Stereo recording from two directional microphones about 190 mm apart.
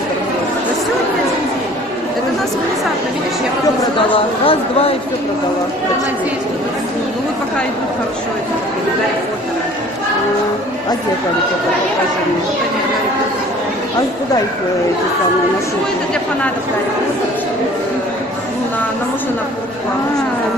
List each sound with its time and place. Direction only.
4.5 s speech: 30° left (ahead or behind)